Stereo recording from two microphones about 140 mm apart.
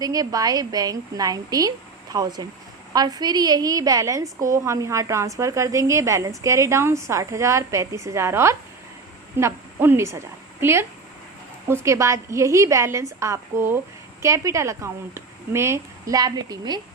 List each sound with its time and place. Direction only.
0.0 s a woman's voice: 25° right (ahead or behind)